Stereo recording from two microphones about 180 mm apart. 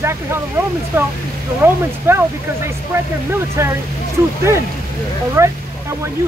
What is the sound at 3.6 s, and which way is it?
Speech, 15° right (ahead or behind).